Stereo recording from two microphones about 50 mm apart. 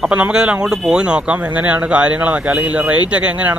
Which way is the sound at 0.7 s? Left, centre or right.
Centre.